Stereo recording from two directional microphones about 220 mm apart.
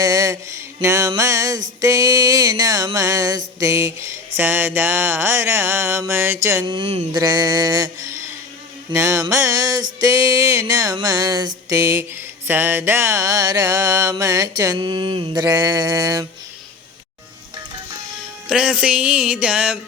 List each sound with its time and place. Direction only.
0.0 s a sound: 15° right (ahead or behind)
1.8 s music: 15° right (ahead or behind)
6.7 s speech: 25° right (ahead or behind)
7.1 s music: 15° right (ahead or behind)
18.4 s music: 5° right (ahead or behind)